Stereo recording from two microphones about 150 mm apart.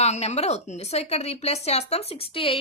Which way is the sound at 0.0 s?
50° left (ahead or behind).